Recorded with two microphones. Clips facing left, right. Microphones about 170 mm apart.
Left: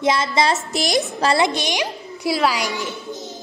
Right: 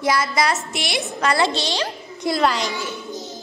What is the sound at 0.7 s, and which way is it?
Speech, 40° left (ahead or behind).